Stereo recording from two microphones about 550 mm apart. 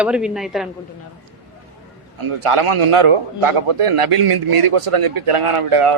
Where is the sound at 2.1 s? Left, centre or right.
Right.